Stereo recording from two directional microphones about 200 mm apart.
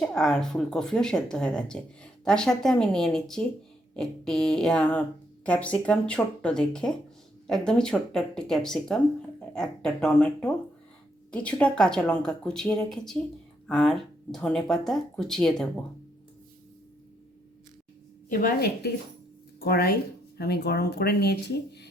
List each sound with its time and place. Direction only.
0.0 s speech: 5° left (ahead or behind)
18.3 s speech: 50° left (ahead or behind)